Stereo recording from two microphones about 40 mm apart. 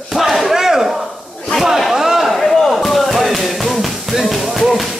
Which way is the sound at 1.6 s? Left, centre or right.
Centre.